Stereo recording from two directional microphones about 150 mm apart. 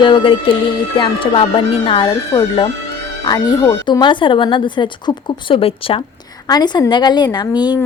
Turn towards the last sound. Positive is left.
turn(degrees=30)  # may be behind; listen again after turning